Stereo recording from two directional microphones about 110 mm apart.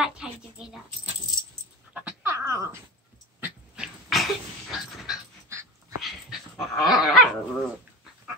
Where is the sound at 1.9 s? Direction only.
15° right (ahead or behind).